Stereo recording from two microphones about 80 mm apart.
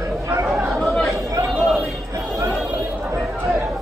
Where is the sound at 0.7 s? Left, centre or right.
Centre.